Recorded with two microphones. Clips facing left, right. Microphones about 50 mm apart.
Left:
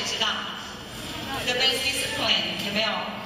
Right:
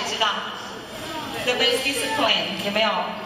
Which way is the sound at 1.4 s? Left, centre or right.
Right.